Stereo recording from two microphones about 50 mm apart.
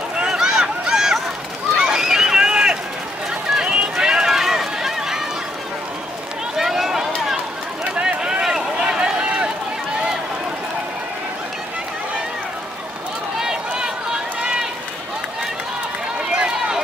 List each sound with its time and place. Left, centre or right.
0.2 s a sound: centre
1.8 s run: centre
6.5 s run: centre
7.8 s a sound: right
8.7 s run: centre
13.4 s run: centre
16.3 s run: centre